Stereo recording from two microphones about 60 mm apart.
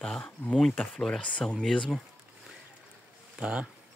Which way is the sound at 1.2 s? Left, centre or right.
Left.